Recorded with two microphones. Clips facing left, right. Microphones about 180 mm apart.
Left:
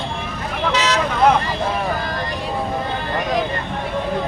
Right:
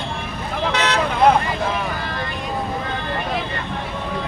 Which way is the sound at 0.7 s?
55° right (ahead or behind).